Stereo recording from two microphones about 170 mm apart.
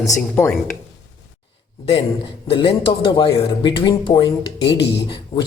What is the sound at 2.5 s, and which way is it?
Speech, 30° left (ahead or behind).